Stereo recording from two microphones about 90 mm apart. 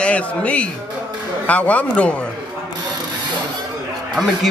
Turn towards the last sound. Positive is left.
turn(degrees=0)  # may be behind; listen again after turning